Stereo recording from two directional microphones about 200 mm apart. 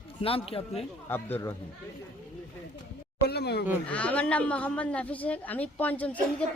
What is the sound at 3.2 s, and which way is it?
Speech, 55° left (ahead or behind).